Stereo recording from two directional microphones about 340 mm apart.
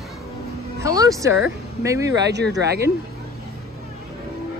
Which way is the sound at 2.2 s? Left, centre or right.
Right.